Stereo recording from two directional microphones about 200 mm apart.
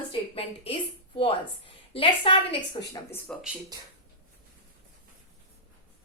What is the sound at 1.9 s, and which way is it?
Speech, 25° left (ahead or behind).